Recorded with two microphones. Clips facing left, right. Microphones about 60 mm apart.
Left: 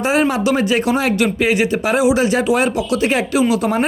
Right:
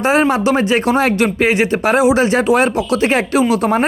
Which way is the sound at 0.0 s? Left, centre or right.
Right.